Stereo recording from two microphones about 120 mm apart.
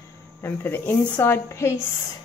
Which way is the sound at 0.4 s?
20° left (ahead or behind).